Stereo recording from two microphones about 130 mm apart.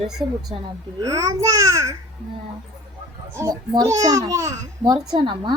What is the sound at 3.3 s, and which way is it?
A child's voice, 25° right (ahead or behind).